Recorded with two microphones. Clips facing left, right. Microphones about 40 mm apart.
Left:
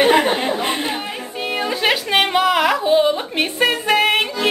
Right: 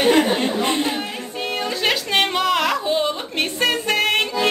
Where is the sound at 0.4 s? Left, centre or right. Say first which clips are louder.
Even; centre.